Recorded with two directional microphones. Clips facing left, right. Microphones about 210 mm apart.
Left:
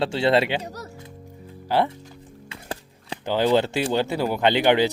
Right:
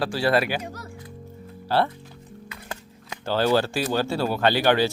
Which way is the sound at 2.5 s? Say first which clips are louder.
Left 5 dB; 30° left (ahead or behind).